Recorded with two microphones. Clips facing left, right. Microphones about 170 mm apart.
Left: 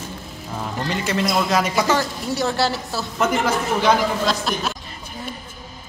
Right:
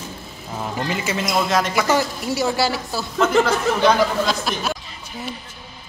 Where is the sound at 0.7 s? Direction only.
5° right (ahead or behind).